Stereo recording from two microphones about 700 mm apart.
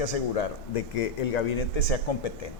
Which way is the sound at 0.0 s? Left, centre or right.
Left.